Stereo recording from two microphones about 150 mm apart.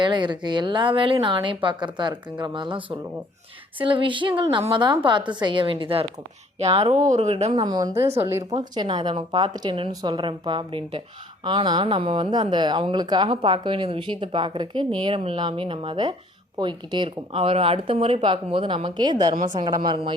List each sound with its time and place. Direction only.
0.0 s speech: 30° right (ahead or behind); by 7.5 s 50° right (ahead or behind)
7.5 s speech: 30° right (ahead or behind)
8.0 s speech: 40° right (ahead or behind)
8.3 s speech: 20° right (ahead or behind)
8.7 s speech: 30° right (ahead or behind)